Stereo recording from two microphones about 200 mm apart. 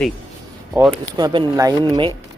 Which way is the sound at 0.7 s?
10° right (ahead or behind).